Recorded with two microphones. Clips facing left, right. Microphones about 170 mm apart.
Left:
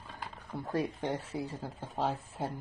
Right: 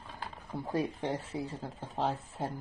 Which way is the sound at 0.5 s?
15° right (ahead or behind).